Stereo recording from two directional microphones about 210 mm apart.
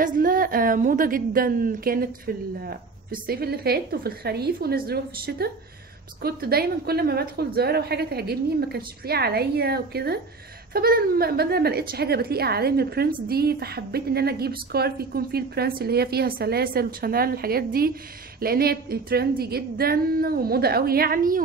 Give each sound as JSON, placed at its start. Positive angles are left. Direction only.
{"t": 0.0, "sound": "a woman's voice", "side_deg": -40}